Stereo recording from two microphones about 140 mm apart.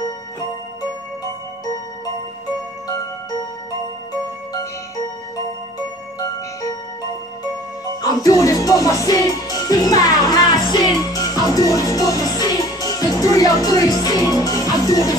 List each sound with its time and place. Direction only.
6.1 s music: 25° left (ahead or behind)
8.0 s music: 25° left (ahead or behind)